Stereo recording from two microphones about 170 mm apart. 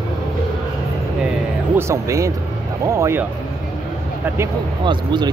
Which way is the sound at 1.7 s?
15° right (ahead or behind).